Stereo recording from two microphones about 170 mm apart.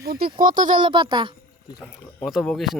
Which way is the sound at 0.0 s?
65° right (ahead or behind).